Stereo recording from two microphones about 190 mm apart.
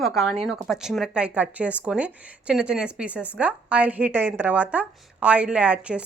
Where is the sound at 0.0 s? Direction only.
Centre (ahead or behind).